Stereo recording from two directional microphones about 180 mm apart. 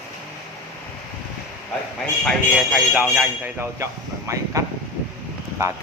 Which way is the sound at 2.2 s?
Centre (ahead or behind).